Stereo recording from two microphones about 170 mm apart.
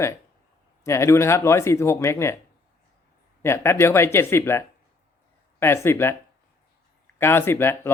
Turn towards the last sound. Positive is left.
turn(degrees=15)  # may be behind; listen again after turning